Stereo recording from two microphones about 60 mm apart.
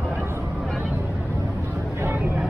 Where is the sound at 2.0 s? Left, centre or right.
Right.